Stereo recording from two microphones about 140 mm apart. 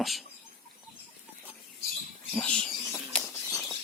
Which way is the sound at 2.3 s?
10° left (ahead or behind).